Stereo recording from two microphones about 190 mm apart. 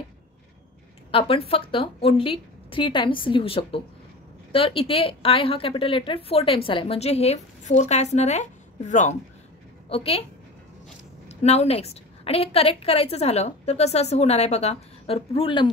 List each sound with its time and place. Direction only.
1.1 s a woman's voice: 30° left (ahead or behind)
11.2 s a woman's voice: 35° left (ahead or behind)